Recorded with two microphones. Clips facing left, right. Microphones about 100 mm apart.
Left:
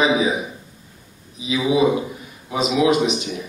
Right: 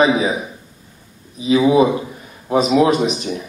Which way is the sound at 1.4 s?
45° right (ahead or behind).